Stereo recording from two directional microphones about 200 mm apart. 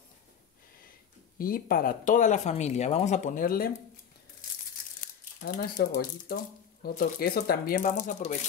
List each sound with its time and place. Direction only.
1.4 s speech: 45° left (ahead or behind)
5.4 s speech: 50° left (ahead or behind)